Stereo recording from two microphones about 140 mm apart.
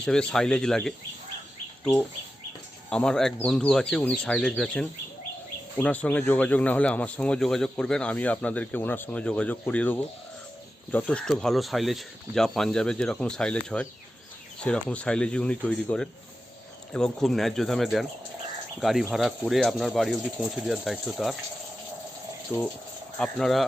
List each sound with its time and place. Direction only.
0.0 s speech: 5° left (ahead or behind)
22.5 s speech: 20° left (ahead or behind)
23.1 s speech: 5° left (ahead or behind)